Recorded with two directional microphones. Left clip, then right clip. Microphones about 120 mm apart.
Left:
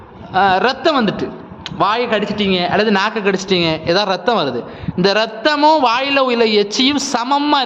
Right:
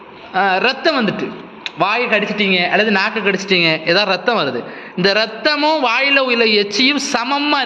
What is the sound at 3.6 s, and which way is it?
A man's voice, 25° left (ahead or behind).